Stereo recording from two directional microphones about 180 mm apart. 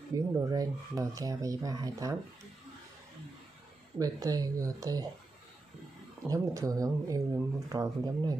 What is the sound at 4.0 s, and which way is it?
Speech, 20° right (ahead or behind).